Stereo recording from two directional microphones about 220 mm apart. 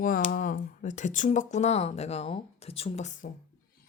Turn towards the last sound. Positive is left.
turn(degrees=35)  # may be behind; listen again after turning